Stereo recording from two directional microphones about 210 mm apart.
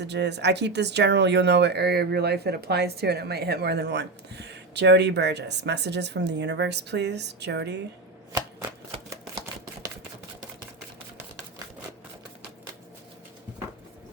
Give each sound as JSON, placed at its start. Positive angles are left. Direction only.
{"t": 0.0, "sound": "speech", "side_deg": -55}